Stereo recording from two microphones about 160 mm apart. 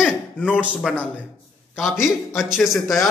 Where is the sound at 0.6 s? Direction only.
5° right (ahead or behind).